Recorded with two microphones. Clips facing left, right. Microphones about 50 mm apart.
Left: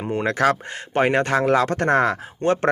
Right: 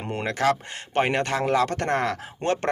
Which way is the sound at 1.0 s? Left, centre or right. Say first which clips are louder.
Left 8 dB; left.